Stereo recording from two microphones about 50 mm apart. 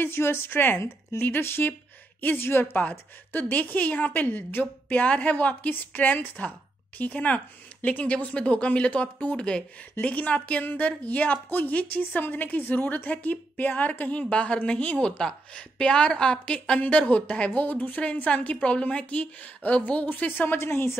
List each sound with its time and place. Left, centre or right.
0.0 s speech: left
3.3 s a woman's voice: left
14.3 s a woman's voice: left
17.6 s a woman's voice: left
20.2 s a woman's voice: left
20.5 s speech: left